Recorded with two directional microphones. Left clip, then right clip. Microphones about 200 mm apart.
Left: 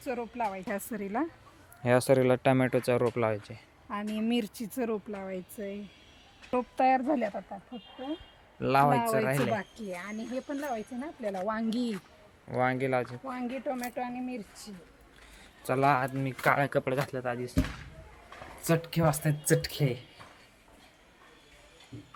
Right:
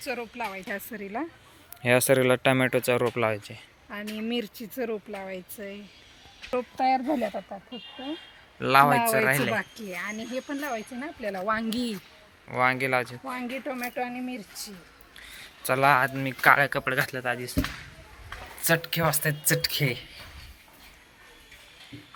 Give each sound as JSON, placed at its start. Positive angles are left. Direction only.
{"t": 0.0, "sound": "speech", "side_deg": 40}
{"t": 1.8, "sound": "speech", "side_deg": 0}
{"t": 3.8, "sound": "speech", "side_deg": 60}
{"t": 5.1, "sound": "speech", "side_deg": 45}
{"t": 7.2, "sound": "speech", "side_deg": -25}
{"t": 8.5, "sound": "speech", "side_deg": 0}
{"t": 9.0, "sound": "speech", "side_deg": -45}
{"t": 9.2, "sound": "speech", "side_deg": 0}
{"t": 9.6, "sound": "speech", "side_deg": -35}
{"t": 11.4, "sound": "speech", "side_deg": -10}
{"t": 12.5, "sound": "speech", "side_deg": 25}
{"t": 13.2, "sound": "speech", "side_deg": -40}
{"t": 15.4, "sound": "speech", "side_deg": 5}
{"t": 18.6, "sound": "speech", "side_deg": 5}